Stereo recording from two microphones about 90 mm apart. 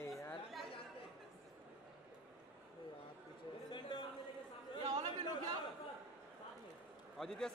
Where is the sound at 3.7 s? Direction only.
55° left (ahead or behind).